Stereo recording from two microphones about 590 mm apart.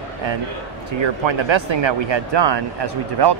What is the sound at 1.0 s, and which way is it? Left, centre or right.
Speech, right.